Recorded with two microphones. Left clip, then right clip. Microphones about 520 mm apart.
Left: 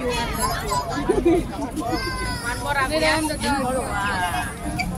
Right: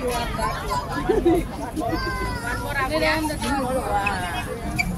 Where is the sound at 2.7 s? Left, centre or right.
Right.